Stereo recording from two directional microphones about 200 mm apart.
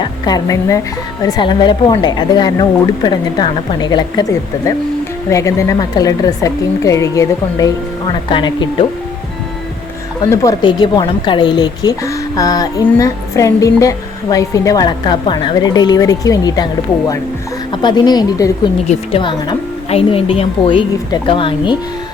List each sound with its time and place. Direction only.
0.0 s a woman's voice: 20° left (ahead or behind)
10.2 s a woman's voice: 20° left (ahead or behind)
17.7 s a woman's voice: 20° left (ahead or behind)